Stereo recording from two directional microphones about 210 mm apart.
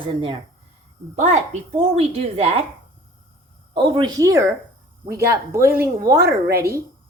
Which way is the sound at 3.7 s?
25° right (ahead or behind).